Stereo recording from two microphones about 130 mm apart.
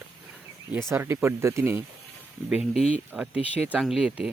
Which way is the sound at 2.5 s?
5° right (ahead or behind).